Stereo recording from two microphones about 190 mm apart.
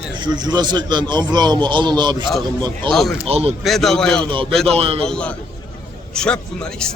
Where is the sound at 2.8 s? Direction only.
Centre (ahead or behind).